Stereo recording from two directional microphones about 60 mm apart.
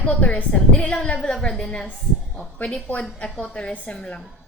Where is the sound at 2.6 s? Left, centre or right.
Centre.